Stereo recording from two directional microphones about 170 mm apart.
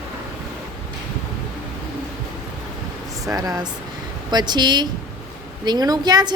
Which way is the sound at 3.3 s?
20° right (ahead or behind).